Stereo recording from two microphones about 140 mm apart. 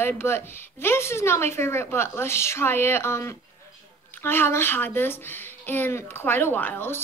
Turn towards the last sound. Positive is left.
turn(degrees=15)  # may be behind; listen again after turning